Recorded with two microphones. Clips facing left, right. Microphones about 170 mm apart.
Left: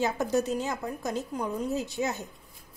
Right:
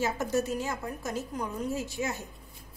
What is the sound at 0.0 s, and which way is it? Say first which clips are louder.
Speech: left 2 dB; 15° left (ahead or behind).